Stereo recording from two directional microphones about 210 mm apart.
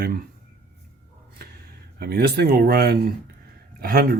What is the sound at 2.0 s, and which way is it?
Speech, 50° right (ahead or behind).